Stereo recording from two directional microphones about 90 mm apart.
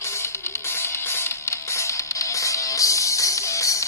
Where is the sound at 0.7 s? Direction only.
25° left (ahead or behind).